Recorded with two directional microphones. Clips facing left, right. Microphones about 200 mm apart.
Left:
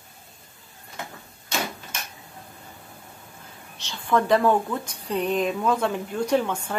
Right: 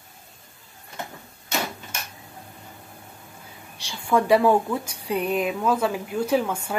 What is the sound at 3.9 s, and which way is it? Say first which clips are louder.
Speech: right 2 dB; 10° right (ahead or behind).